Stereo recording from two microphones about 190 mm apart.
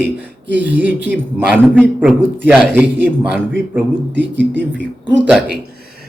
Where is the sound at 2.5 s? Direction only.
5° right (ahead or behind).